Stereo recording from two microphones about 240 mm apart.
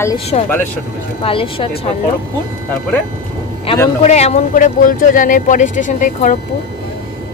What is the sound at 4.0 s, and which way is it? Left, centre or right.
Speech, left.